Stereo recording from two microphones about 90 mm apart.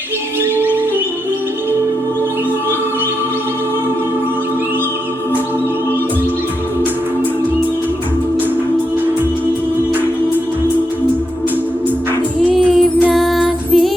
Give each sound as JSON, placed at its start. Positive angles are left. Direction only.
{"t": 0.5, "sound": "music", "side_deg": -20}
{"t": 13.1, "sound": "music", "side_deg": 0}